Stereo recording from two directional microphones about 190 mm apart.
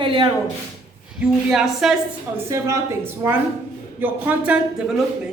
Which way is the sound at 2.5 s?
15° right (ahead or behind).